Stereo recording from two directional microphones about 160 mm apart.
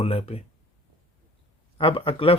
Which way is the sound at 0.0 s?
40° left (ahead or behind).